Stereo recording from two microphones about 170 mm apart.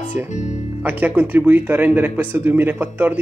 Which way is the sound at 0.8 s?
10° right (ahead or behind).